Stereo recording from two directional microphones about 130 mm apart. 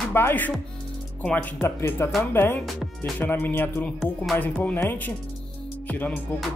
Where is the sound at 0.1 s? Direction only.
15° left (ahead or behind).